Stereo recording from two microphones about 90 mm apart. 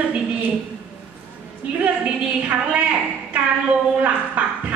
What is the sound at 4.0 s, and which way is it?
Speech, 15° right (ahead or behind).